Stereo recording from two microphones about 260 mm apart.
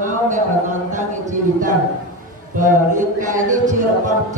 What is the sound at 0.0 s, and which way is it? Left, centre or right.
Speech, right.